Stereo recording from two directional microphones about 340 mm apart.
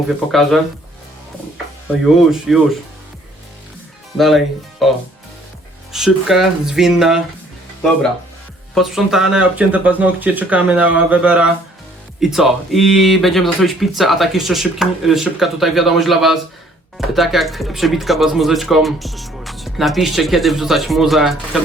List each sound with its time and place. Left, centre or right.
0.3 s speech: centre
2.3 s speech: centre
4.2 s speech: centre
8.7 s speech: centre